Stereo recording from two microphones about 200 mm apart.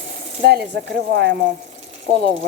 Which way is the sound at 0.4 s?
55° right (ahead or behind).